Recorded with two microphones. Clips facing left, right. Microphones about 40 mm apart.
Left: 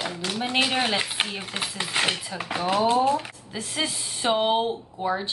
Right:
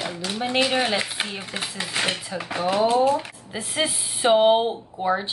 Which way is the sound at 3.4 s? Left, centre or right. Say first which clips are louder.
Right 3 dB; centre.